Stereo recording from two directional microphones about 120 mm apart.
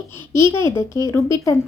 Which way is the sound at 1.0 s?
25° left (ahead or behind).